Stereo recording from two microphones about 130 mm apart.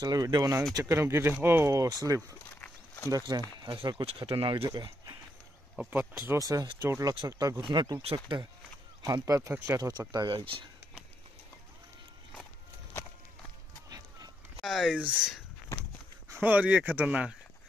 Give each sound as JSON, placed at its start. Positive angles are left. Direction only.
{"t": 0.0, "sound": "speech", "side_deg": -30}
{"t": 4.6, "sound": "speech", "side_deg": -30}
{"t": 5.8, "sound": "speech", "side_deg": -15}
{"t": 9.0, "sound": "speech", "side_deg": -25}
{"t": 13.8, "sound": "run", "side_deg": -25}
{"t": 14.6, "sound": "speech", "side_deg": 0}